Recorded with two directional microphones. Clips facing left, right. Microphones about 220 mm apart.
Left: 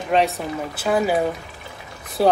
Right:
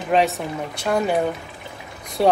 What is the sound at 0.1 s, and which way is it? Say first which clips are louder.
Speech: even; centre (ahead or behind).